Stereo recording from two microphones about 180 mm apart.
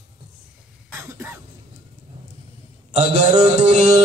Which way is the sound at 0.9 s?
10° right (ahead or behind).